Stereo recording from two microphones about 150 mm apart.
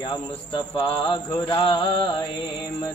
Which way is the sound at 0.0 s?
35° left (ahead or behind).